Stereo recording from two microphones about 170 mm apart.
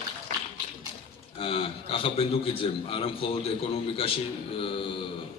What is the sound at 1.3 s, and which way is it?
A man's voice, 35° left (ahead or behind).